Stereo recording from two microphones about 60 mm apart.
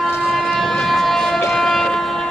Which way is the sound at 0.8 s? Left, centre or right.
Centre.